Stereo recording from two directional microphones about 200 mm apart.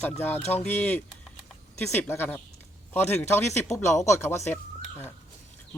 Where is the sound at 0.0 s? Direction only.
10° left (ahead or behind).